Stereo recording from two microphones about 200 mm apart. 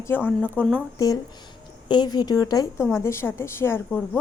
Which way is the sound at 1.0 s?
15° left (ahead or behind).